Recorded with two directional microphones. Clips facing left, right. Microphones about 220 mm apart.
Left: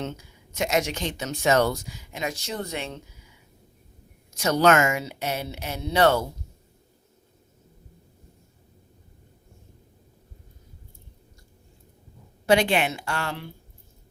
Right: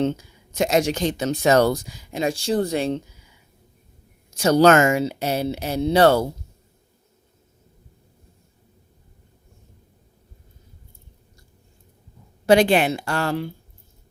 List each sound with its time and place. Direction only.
0.0 s speech: 30° right (ahead or behind)
4.4 s speech: 30° right (ahead or behind)
12.5 s speech: 40° right (ahead or behind)